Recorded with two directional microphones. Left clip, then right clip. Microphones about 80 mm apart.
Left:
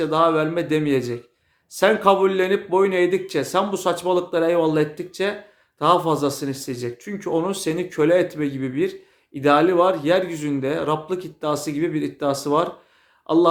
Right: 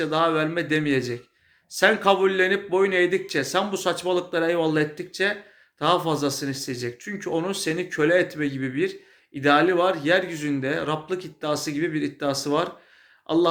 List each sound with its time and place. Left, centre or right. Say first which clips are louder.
0.0 s a man's voice: left 4 dB; left